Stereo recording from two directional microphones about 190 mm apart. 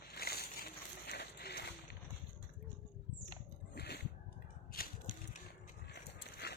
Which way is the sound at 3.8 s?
60° left (ahead or behind).